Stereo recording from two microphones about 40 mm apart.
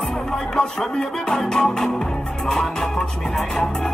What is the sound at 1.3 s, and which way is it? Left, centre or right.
Music, centre.